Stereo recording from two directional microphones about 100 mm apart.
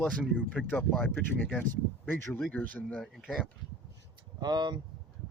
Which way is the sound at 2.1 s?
25° left (ahead or behind).